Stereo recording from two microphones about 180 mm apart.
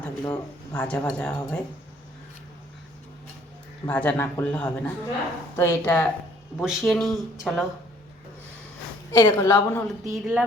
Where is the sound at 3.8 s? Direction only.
10° left (ahead or behind).